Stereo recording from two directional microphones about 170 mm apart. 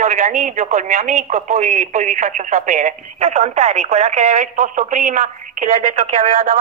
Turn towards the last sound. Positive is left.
turn(degrees=-50)  # may be behind; listen again after turning